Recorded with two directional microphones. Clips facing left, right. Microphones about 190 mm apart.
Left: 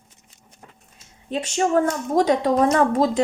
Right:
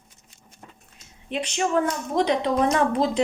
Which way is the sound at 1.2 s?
40° left (ahead or behind).